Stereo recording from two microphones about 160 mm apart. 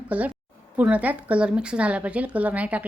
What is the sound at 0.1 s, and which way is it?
A woman's voice, 10° right (ahead or behind).